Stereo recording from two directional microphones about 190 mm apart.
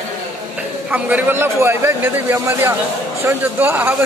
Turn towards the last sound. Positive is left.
turn(degrees=-10)  # may be behind; listen again after turning